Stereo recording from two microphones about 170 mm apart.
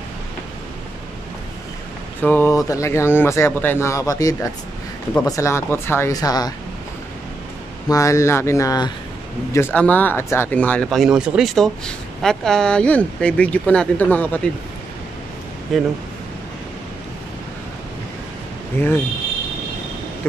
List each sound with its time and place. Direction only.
2.2 s speech: 15° left (ahead or behind)
7.9 s speech: 20° left (ahead or behind)
15.7 s speech: centre (ahead or behind)
18.8 s speech: 15° left (ahead or behind)